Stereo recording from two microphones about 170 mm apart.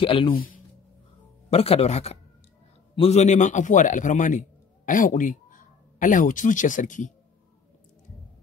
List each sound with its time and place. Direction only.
0.0 s speech: 30° left (ahead or behind)
1.5 s a man's voice: 35° left (ahead or behind)